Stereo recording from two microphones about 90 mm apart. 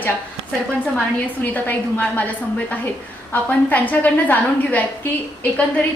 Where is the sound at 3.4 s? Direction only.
20° left (ahead or behind).